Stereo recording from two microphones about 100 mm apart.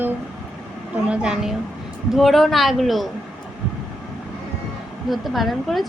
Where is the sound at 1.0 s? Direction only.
10° right (ahead or behind).